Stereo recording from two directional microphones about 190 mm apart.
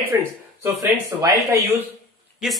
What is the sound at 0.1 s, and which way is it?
Speech, 10° right (ahead or behind).